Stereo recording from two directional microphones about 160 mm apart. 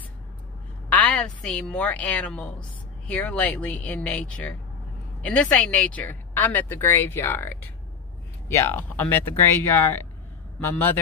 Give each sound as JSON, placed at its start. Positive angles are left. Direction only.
{"t": 0.8, "sound": "a woman's voice", "side_deg": 10}